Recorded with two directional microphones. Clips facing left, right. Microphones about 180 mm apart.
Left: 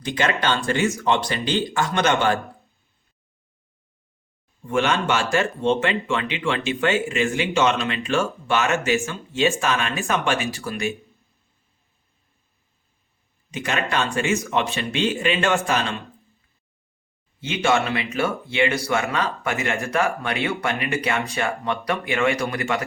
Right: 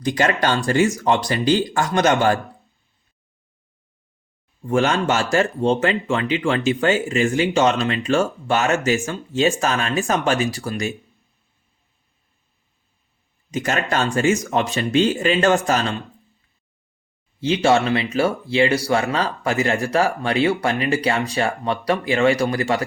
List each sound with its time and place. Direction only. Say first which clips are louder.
0.0 s speech: right 4 dB; 40° right (ahead or behind)
4.6 s speech: right 3 dB; 35° right (ahead or behind)
13.5 s speech: right 3 dB; 40° right (ahead or behind)
17.4 s speech: right 4 dB; 35° right (ahead or behind)